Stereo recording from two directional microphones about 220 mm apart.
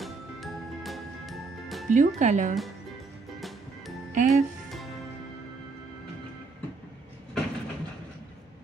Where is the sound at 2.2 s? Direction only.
35° right (ahead or behind).